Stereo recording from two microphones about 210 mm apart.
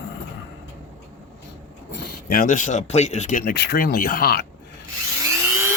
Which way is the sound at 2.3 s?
40° left (ahead or behind).